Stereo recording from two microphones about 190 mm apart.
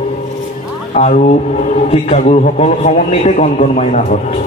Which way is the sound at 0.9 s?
35° left (ahead or behind).